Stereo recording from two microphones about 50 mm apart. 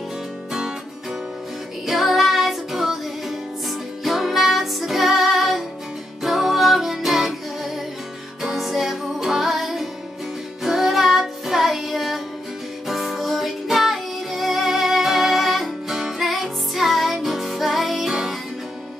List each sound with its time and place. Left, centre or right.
0.5 s music: centre
1.9 s music: centre